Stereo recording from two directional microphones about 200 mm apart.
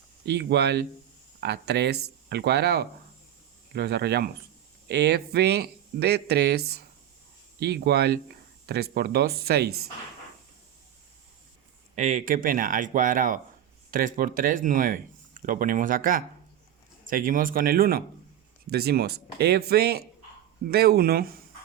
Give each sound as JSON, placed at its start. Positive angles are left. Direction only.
{"t": 0.3, "sound": "speech", "side_deg": -55}
{"t": 11.9, "sound": "speech", "side_deg": -35}